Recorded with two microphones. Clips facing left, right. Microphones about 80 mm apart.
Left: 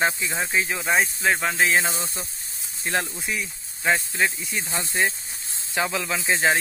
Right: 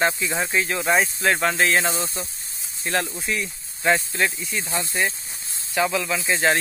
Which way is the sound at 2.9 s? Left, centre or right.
Left.